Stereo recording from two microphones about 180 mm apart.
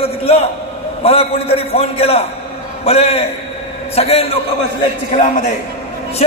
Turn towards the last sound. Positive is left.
turn(degrees=40)  # may be behind; listen again after turning